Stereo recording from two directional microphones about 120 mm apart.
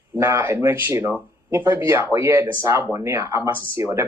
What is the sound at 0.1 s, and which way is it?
Speech, 20° right (ahead or behind).